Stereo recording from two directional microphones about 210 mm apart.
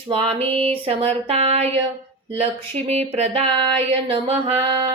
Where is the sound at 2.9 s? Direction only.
30° right (ahead or behind).